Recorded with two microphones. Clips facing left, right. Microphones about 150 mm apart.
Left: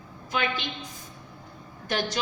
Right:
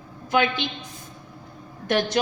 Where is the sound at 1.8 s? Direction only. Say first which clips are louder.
Right 6 dB; 65° right (ahead or behind).